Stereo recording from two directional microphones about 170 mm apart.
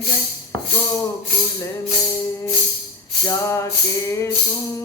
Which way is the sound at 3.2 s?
20° left (ahead or behind).